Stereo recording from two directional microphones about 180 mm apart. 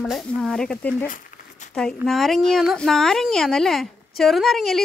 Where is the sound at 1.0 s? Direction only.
50° left (ahead or behind).